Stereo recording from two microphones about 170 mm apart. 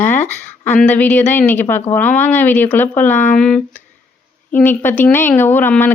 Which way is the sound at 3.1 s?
45° left (ahead or behind).